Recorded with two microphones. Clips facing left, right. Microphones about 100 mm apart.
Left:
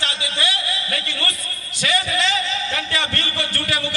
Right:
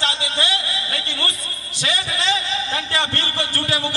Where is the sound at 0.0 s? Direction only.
30° right (ahead or behind).